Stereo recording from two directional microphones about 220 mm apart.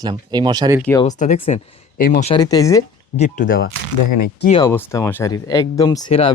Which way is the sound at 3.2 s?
40° left (ahead or behind).